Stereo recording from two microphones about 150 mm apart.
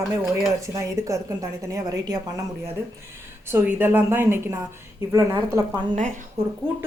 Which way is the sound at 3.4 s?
15° right (ahead or behind).